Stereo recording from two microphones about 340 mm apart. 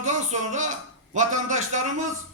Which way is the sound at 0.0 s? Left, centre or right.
Right.